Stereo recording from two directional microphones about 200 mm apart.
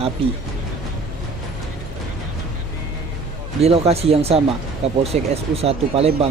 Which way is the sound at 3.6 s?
30° right (ahead or behind).